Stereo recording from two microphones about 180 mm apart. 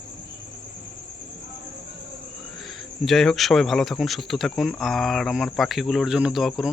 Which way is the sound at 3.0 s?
Centre (ahead or behind).